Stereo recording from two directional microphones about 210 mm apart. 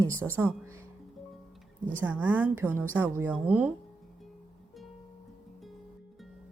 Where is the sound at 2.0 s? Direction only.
5° right (ahead or behind).